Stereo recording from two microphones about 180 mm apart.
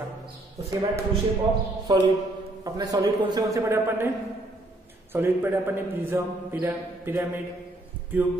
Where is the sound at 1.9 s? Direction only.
25° right (ahead or behind).